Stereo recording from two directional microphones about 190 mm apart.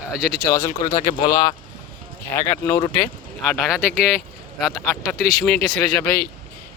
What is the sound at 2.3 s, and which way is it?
Speech, 10° left (ahead or behind).